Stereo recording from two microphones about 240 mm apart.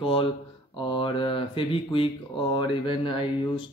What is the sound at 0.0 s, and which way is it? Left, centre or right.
Speech, left.